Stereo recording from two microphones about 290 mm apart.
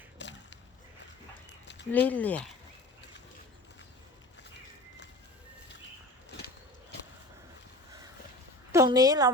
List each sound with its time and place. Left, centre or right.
0.2 s a sound: left
1.9 s speech: centre
8.7 s a woman's voice: centre